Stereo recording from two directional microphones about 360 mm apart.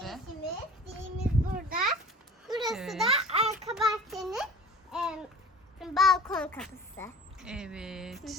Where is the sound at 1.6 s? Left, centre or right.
Right.